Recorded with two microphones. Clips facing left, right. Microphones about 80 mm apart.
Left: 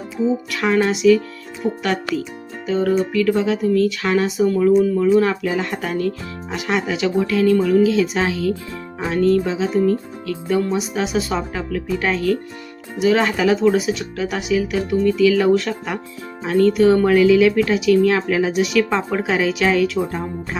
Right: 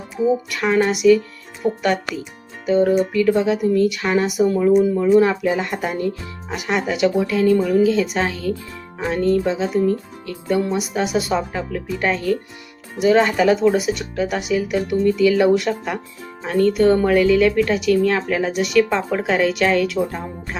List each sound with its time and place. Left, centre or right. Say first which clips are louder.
0.2 s speech: right 1 dB; centre
2.6 s speech: right 2 dB; centre
5.5 s speech: right 1 dB; centre